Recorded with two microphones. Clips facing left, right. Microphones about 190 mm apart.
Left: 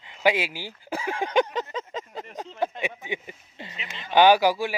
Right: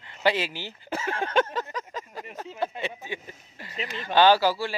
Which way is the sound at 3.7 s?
40° right (ahead or behind).